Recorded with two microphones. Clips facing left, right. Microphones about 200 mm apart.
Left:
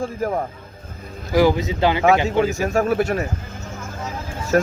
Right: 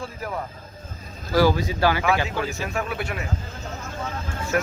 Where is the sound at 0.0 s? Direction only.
45° left (ahead or behind).